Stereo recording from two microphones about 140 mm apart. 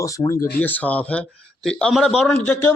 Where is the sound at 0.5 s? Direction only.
10° left (ahead or behind).